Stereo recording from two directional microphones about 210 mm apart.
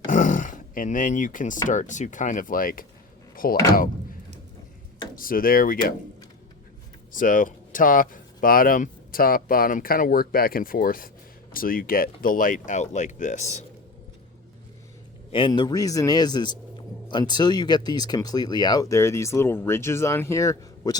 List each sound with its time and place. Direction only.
0.1 s a sound: 40° left (ahead or behind)
1.6 s speech: 35° left (ahead or behind)
5.1 s speech: 40° left (ahead or behind)
7.1 s speech: 40° left (ahead or behind)
15.3 s a man's voice: 25° left (ahead or behind)